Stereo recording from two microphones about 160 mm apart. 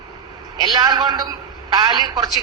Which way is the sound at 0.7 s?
25° right (ahead or behind).